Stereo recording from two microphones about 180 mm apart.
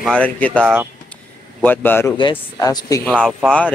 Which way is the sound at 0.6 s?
10° right (ahead or behind).